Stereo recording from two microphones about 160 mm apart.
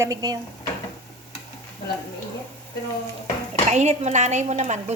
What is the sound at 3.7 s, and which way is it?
A woman's voice, 45° right (ahead or behind).